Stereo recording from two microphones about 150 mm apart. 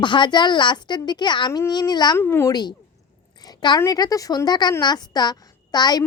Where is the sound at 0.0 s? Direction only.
30° left (ahead or behind).